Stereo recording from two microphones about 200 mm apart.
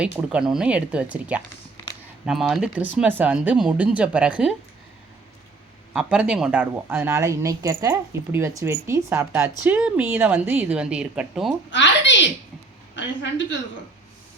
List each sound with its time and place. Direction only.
0.0 s speech: 5° right (ahead or behind)
5.9 s a woman's voice: 5° right (ahead or behind)
11.7 s a sound: 65° left (ahead or behind)
13.0 s a woman's voice: 65° left (ahead or behind)